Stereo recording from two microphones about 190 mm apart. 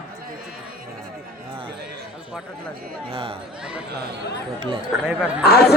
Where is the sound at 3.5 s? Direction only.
5° right (ahead or behind).